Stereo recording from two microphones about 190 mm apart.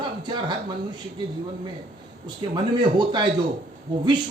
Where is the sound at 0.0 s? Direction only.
25° right (ahead or behind).